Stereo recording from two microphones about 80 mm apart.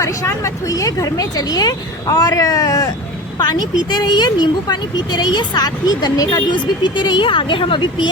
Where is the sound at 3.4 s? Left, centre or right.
Left.